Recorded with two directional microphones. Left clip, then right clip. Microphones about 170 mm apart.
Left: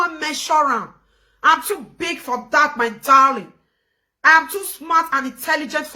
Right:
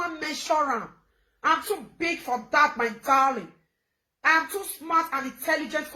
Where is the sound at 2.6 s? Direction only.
25° left (ahead or behind).